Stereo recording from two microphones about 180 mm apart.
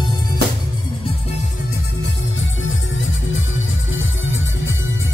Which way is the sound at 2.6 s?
90° left.